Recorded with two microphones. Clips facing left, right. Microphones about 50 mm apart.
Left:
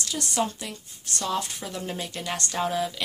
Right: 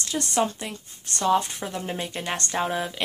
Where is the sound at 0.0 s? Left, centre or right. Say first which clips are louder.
Right 3 dB; right.